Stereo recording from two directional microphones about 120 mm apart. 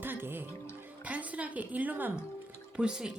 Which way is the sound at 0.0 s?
15° right (ahead or behind).